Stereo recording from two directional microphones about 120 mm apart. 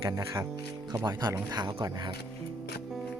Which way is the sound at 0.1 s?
30° right (ahead or behind).